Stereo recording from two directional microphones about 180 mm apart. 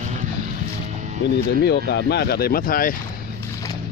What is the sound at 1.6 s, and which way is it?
Speech, 70° left (ahead or behind).